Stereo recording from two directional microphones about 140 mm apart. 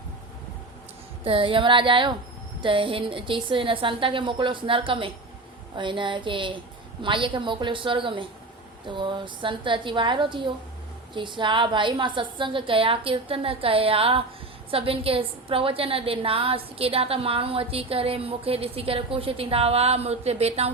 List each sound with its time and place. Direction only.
1.2 s a woman's voice: 40° right (ahead or behind)